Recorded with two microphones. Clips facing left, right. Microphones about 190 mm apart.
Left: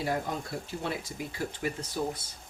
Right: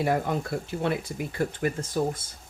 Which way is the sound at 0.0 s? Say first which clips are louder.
Right 6 dB; 65° right (ahead or behind).